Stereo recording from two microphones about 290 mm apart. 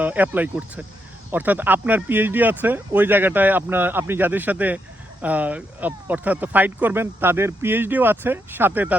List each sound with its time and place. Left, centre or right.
0.0 s speech: centre